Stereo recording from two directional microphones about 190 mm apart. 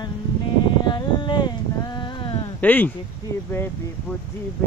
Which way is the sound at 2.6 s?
10° left (ahead or behind).